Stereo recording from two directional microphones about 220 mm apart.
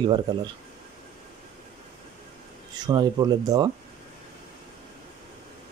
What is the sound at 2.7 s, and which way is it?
Speech, 20° right (ahead or behind).